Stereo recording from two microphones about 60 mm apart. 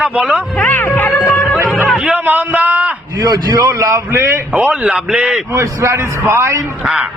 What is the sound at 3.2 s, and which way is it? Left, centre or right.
Speech, right.